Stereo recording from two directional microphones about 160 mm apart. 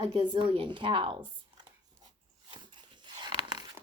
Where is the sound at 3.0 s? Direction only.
25° right (ahead or behind).